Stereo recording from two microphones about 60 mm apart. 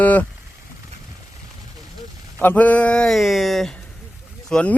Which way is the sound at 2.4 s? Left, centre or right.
Left.